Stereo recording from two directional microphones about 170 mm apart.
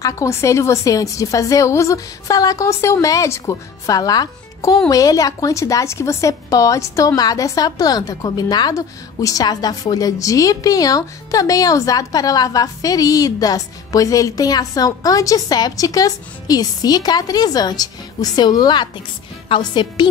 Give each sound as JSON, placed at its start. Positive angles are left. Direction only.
{"t": 0.0, "sound": "a woman's voice", "side_deg": 15}